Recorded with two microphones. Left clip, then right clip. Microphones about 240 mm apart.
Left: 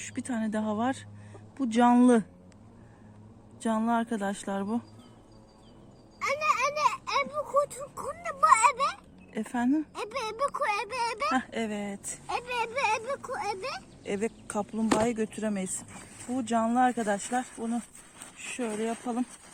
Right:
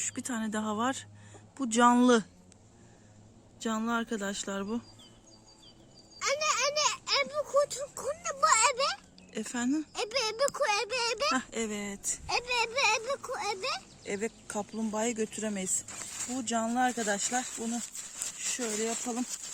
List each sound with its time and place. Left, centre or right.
0.0 s speech: centre
3.6 s speech: centre
6.2 s a sound: centre
9.3 s speech: centre
9.9 s speech: centre
12.2 s speech: centre
15.1 s speech: centre
16.5 s speech: centre